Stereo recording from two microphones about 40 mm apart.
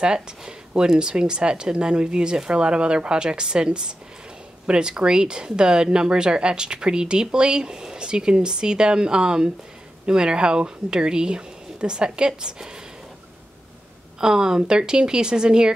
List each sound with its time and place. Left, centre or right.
0.0 s speech: right
14.2 s speech: centre